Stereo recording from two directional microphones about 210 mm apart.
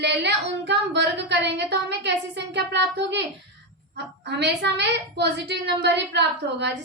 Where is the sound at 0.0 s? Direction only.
55° right (ahead or behind).